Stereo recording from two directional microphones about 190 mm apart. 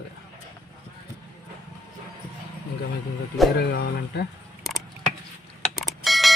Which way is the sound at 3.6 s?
60° left (ahead or behind).